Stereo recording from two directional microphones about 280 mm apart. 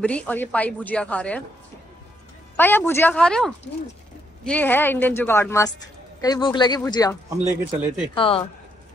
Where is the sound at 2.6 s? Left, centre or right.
Centre.